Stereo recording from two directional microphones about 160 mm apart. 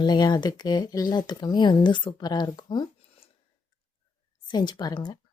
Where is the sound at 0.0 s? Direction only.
25° left (ahead or behind).